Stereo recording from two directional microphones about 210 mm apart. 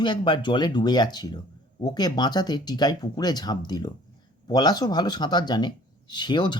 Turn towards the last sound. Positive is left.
turn(degrees=20)  # may be behind; listen again after turning